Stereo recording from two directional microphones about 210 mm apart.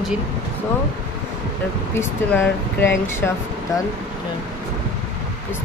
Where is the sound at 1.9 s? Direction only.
10° left (ahead or behind).